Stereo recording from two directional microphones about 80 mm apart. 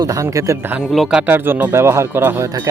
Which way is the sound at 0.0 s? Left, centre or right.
Right.